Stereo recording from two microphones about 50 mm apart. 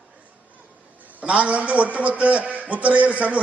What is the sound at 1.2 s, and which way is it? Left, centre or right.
A man's voice, right.